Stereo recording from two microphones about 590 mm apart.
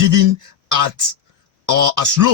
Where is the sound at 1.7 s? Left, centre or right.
Right.